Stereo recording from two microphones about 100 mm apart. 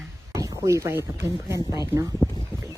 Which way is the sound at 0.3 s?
30° right (ahead or behind).